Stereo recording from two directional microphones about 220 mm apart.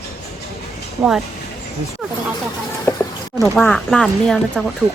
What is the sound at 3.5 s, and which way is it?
Speech, centre (ahead or behind).